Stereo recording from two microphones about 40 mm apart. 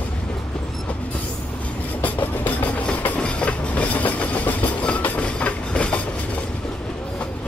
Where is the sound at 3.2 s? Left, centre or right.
Left.